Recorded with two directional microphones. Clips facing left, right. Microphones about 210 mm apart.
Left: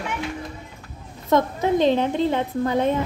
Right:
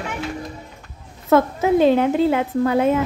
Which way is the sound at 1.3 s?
5° right (ahead or behind).